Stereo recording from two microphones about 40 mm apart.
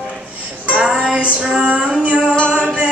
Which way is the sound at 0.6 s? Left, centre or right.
Right.